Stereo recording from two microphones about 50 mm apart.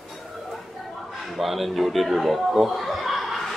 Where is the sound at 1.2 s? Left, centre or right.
Centre.